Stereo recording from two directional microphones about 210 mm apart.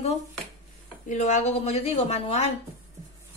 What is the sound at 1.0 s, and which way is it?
Speech, 35° left (ahead or behind).